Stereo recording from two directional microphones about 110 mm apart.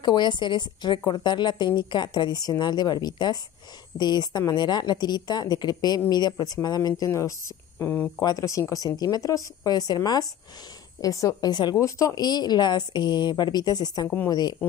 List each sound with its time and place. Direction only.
0.0 s a woman's voice: 45° left (ahead or behind)
14.0 s a woman's voice: 20° left (ahead or behind)
14.3 s a woman's voice: 40° left (ahead or behind)